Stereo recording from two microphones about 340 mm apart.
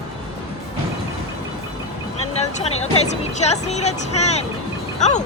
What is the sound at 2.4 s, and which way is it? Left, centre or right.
Speech, centre.